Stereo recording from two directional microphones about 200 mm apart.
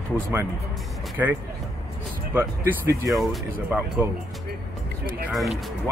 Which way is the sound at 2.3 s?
15° right (ahead or behind).